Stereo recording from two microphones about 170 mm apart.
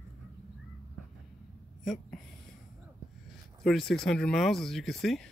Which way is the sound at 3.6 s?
Centre (ahead or behind).